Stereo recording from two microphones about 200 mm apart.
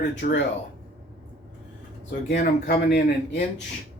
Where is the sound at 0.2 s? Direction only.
50° left (ahead or behind).